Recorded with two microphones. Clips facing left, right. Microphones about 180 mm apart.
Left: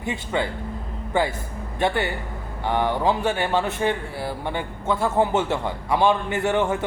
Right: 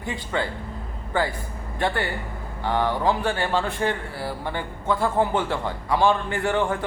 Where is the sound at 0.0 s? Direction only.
20° left (ahead or behind).